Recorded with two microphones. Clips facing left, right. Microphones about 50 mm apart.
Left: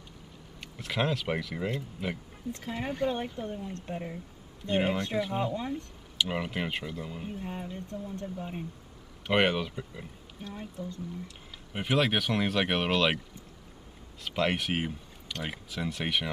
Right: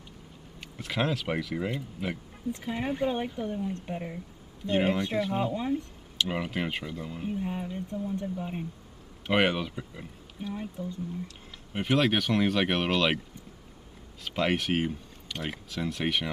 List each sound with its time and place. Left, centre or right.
0.6 s speech: centre
6.1 s speech: centre
11.2 s speech: centre
14.2 s speech: centre